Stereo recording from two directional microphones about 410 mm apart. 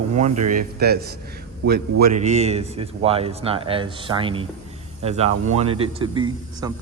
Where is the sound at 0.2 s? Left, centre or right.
Centre.